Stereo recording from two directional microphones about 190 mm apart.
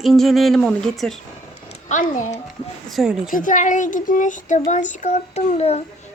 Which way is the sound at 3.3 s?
45° left (ahead or behind).